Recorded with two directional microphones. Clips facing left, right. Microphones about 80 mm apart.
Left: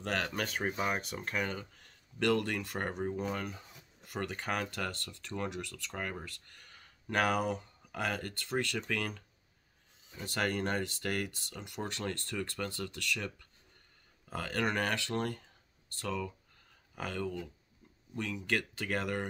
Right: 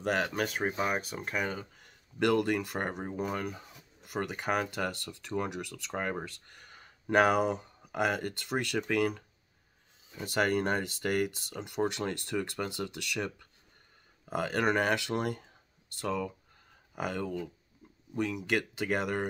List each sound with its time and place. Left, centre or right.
0.0 s speech: centre